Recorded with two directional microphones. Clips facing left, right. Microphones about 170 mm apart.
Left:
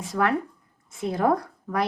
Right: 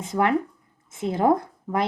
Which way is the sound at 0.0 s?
20° right (ahead or behind).